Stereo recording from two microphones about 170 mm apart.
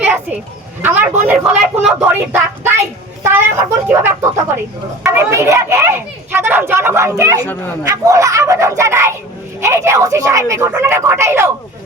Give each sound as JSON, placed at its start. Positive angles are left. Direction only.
{"t": 0.0, "sound": "a sound", "side_deg": -10}
{"t": 0.8, "sound": "speech", "side_deg": -10}
{"t": 3.8, "sound": "speech", "side_deg": -15}